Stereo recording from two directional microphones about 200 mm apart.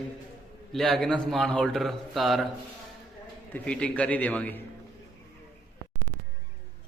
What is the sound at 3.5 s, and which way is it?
A man's voice, 5° left (ahead or behind).